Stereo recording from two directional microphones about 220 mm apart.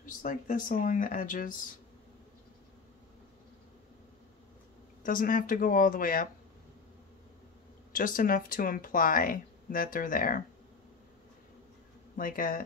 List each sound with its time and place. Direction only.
0.0 s speech: 35° left (ahead or behind)
5.0 s speech: 40° left (ahead or behind)
7.9 s speech: 40° left (ahead or behind)
12.2 s speech: 40° left (ahead or behind)